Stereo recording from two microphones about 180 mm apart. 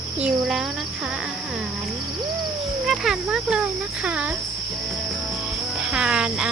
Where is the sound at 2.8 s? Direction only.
Centre (ahead or behind).